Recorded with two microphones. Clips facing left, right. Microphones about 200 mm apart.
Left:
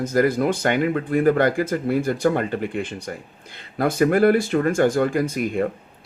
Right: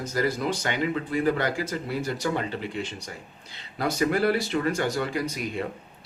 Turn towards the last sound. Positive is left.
turn(degrees=50)  # may be behind; listen again after turning